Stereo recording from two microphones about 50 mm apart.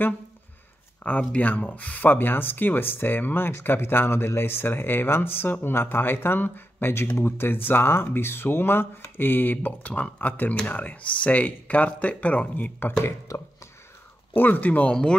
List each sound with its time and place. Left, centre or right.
1.0 s speech: left
2.0 s speech: left
13.3 s speech: left
14.3 s speech: left